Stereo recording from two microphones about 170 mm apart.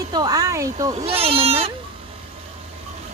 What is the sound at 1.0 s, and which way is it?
Speech, 35° right (ahead or behind).